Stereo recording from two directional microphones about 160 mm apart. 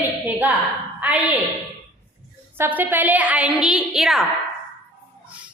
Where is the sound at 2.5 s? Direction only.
15° right (ahead or behind).